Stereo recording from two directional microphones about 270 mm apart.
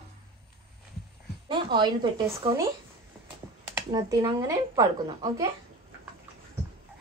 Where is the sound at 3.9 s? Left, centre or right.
Centre.